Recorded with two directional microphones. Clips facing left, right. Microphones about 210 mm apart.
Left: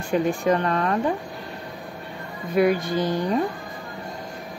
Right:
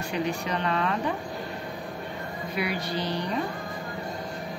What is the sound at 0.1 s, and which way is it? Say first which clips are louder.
Speech: left 9 dB; 50° left (ahead or behind).